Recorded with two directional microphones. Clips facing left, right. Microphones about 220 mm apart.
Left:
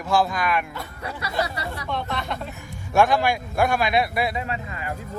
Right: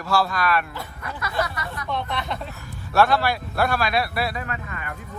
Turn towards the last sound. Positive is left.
turn(degrees=25)  # may be behind; listen again after turning